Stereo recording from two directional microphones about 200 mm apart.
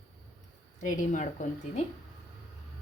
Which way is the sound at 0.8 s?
40° left (ahead or behind).